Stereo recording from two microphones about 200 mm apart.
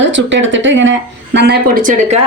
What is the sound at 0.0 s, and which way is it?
Speech, 65° right (ahead or behind).